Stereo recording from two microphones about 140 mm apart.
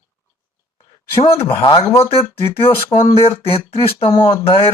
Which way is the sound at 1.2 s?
40° left (ahead or behind).